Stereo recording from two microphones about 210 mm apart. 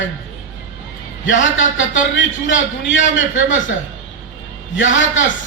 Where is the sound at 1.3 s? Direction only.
65° left (ahead or behind).